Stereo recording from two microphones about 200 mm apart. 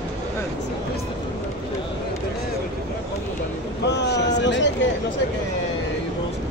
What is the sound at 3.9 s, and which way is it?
Boat, 60° left (ahead or behind).